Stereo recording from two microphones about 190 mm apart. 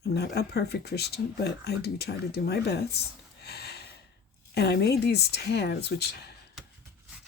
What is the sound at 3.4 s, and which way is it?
Snort, 55° left (ahead or behind).